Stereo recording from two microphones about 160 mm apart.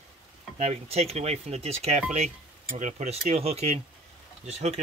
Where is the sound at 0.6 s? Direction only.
40° right (ahead or behind).